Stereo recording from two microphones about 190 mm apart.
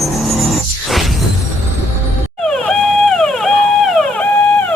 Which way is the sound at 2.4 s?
5° left (ahead or behind).